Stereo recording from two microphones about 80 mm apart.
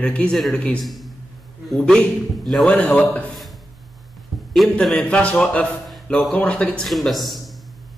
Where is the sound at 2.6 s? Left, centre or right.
Centre.